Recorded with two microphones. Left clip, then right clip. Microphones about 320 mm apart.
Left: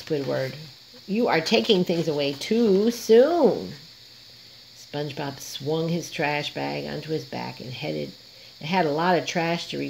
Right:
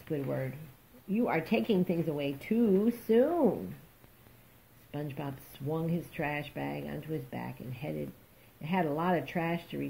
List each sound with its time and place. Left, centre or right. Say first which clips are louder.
0.1 s speech: left 9 dB; left
4.9 s speech: left 9 dB; left